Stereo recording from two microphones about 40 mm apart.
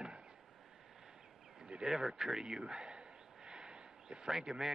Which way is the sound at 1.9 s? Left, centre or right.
Centre.